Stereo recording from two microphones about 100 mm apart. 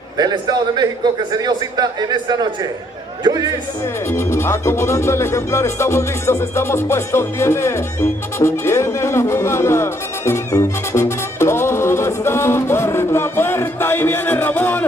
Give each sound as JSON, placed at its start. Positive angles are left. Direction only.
{"t": 0.2, "sound": "a man's voice", "side_deg": -45}
{"t": 4.1, "sound": "music", "side_deg": 25}